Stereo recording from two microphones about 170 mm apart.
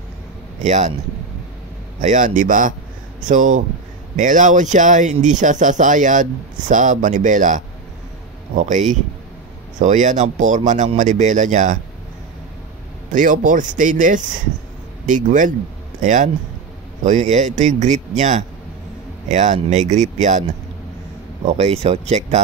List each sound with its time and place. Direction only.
0.6 s speech: 45° right (ahead or behind)
2.0 s speech: 50° right (ahead or behind)
13.1 s speech: 50° right (ahead or behind)
21.5 s speech: 40° right (ahead or behind)